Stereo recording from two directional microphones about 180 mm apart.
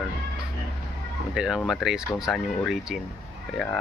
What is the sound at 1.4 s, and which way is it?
Speech, 5° right (ahead or behind).